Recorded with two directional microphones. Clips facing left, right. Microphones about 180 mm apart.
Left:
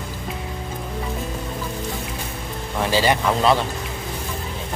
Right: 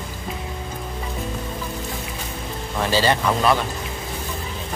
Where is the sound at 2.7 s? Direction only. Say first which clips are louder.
Even; 15° left (ahead or behind).